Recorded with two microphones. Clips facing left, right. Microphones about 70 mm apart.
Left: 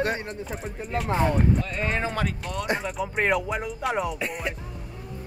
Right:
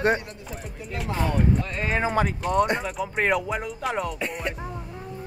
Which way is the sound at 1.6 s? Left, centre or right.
Centre.